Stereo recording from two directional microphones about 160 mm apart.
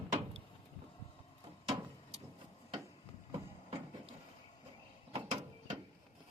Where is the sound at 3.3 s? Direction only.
35° right (ahead or behind).